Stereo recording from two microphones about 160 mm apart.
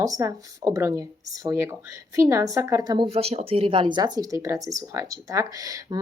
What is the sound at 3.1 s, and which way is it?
Speech, 40° right (ahead or behind).